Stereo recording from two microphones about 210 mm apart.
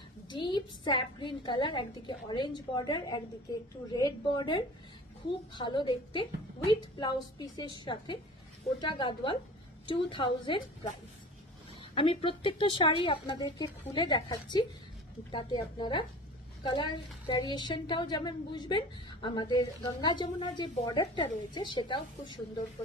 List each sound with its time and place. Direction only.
0.3 s a woman's voice: 20° left (ahead or behind)
11.9 s a woman's voice: 25° left (ahead or behind)